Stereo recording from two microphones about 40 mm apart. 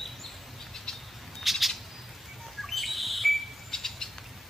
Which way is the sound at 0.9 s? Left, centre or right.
Centre.